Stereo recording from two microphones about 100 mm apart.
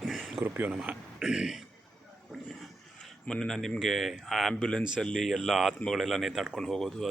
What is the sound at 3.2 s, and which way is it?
Speech, 5° left (ahead or behind).